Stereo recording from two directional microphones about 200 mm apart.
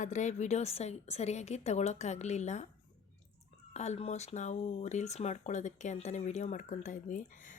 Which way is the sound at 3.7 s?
35° left (ahead or behind).